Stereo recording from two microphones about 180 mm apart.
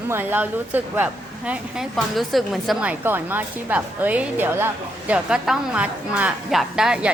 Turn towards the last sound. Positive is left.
turn(degrees=-5)  # may be behind; listen again after turning